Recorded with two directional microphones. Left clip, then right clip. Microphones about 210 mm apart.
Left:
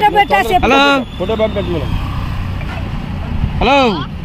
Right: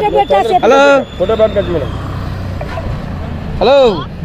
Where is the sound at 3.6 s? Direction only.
35° left (ahead or behind).